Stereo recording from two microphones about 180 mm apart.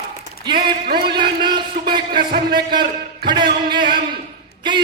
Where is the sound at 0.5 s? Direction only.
60° right (ahead or behind).